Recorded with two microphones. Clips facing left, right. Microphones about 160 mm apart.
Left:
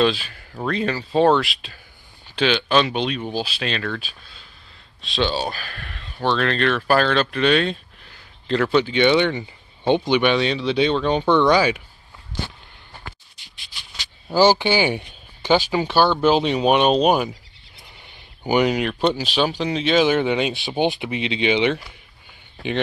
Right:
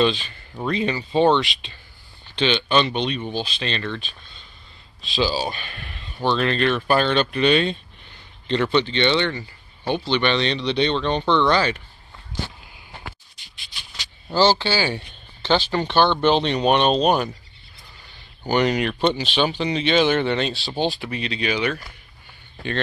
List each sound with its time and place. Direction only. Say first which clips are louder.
0.0 s speech: left 1 dB; 5° left (ahead or behind)
14.3 s speech: left 3 dB; 15° left (ahead or behind)
17.8 s speech: left 2 dB; 20° left (ahead or behind)